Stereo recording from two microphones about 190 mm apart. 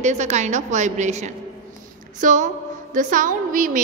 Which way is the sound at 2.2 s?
40° right (ahead or behind).